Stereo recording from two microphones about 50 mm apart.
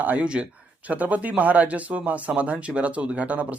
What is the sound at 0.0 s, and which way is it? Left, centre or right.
Speech, right.